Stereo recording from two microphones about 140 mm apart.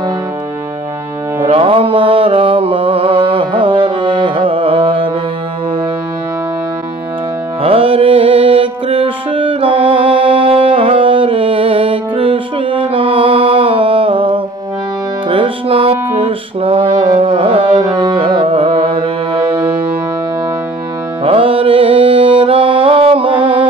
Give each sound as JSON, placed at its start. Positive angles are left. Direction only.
{"t": 1.4, "sound": "music", "side_deg": -40}
{"t": 7.6, "sound": "music", "side_deg": -40}
{"t": 17.8, "sound": "carnatic music", "side_deg": -30}
{"t": 21.2, "sound": "music", "side_deg": -40}